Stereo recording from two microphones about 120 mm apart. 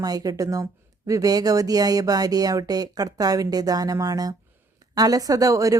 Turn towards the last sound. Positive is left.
turn(degrees=-30)  # may be behind; listen again after turning